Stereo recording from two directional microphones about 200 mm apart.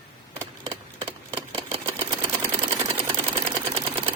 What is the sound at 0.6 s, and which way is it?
Engine, 25° right (ahead or behind).